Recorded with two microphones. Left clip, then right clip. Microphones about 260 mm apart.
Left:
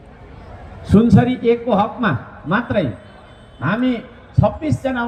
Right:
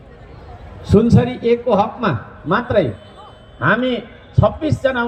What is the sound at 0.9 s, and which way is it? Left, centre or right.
A man's voice, centre.